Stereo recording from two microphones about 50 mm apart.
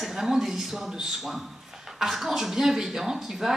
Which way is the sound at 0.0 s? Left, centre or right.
Centre.